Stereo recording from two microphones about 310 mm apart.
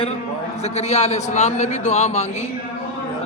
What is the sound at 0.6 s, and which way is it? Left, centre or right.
A man's voice, left.